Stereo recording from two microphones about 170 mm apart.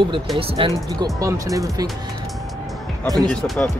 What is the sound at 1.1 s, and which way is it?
Speech, 20° right (ahead or behind).